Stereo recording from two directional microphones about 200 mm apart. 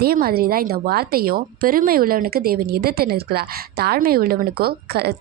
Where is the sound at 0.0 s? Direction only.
50° right (ahead or behind).